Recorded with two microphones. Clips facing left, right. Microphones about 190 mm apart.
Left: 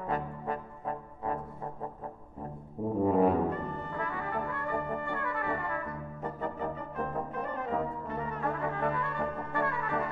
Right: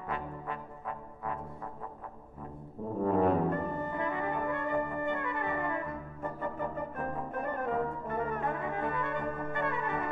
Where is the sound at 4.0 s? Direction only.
20° right (ahead or behind).